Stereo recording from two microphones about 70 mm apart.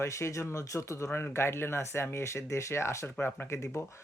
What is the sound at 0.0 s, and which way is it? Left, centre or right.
Speech, left.